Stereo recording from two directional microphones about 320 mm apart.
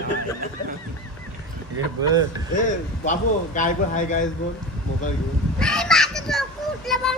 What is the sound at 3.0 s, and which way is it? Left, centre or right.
A man's voice, left.